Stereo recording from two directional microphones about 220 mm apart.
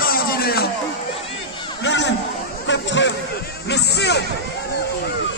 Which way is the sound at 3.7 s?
50° left (ahead or behind).